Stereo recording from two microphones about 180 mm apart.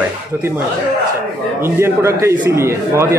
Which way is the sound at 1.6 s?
15° right (ahead or behind).